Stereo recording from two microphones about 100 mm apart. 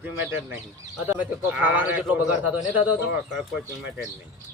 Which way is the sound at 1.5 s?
15° right (ahead or behind).